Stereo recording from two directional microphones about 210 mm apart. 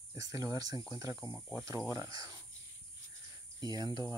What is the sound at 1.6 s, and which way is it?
Speech, 15° right (ahead or behind).